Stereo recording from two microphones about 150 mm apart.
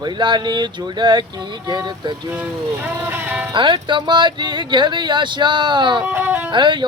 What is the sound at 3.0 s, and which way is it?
Speech, 10° right (ahead or behind).